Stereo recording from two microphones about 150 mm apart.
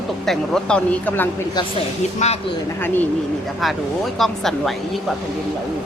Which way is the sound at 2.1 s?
45° left (ahead or behind).